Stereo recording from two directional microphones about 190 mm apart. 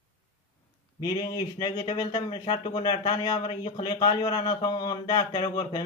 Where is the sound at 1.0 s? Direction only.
20° left (ahead or behind).